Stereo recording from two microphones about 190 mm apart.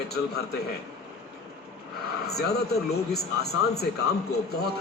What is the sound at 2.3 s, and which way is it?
A man's voice, 55° left (ahead or behind).